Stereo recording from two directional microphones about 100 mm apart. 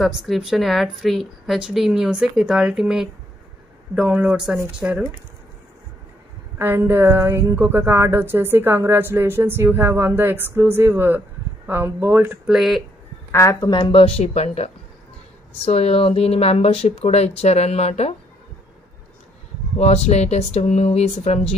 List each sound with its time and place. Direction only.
0.0 s a woman's voice: centre (ahead or behind)
6.6 s a woman's voice: 20° right (ahead or behind)
12.4 s a woman's voice: centre (ahead or behind)
13.3 s speech: 30° left (ahead or behind)
13.6 s speech: 50° left (ahead or behind); by 18.1 s 90° left
19.8 s speech: 90° left